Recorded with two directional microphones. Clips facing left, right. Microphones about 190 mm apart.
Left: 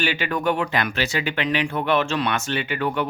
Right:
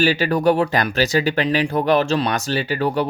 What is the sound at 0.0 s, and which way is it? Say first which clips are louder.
Speech: right 7 dB; 35° right (ahead or behind).